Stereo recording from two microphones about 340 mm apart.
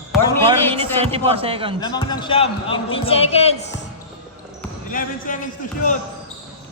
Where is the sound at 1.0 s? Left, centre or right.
Centre.